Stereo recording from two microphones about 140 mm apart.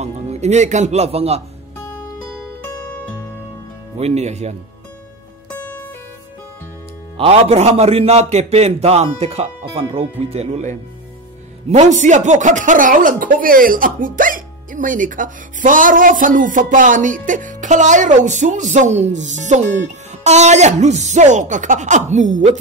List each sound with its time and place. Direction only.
0.0 s a man's voice: 50° right (ahead or behind)
4.0 s a man's voice: 50° right (ahead or behind)
5.5 s music: 10° left (ahead or behind)
7.2 s a man's voice: 50° right (ahead or behind)